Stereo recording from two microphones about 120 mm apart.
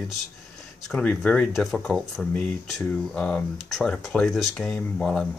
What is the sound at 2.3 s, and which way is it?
Speech, 10° left (ahead or behind).